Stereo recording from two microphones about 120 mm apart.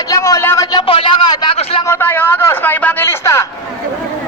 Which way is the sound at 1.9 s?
20° left (ahead or behind).